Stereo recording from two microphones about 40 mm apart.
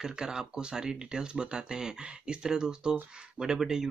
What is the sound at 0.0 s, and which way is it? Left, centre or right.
Speech, centre.